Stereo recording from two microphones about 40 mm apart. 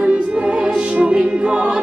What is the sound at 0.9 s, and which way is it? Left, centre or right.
Music, right.